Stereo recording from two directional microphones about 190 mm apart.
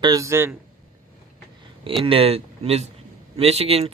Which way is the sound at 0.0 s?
20° right (ahead or behind).